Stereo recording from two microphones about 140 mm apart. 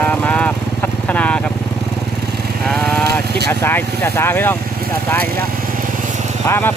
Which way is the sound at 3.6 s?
15° left (ahead or behind).